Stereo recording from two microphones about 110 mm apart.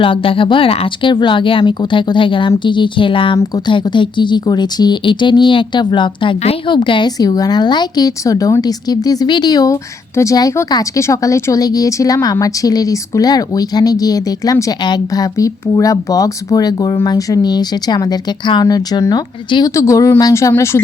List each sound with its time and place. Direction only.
0.0 s speech: 55° left (ahead or behind)
7.2 s a woman's voice: 35° left (ahead or behind)
19.7 s speech: 30° left (ahead or behind)